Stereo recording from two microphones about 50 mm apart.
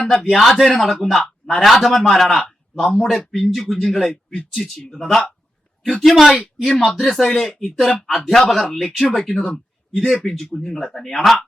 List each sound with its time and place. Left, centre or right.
0.0 s speech: centre
1.2 s a man's voice: centre
4.1 s speech: left
4.6 s speech: centre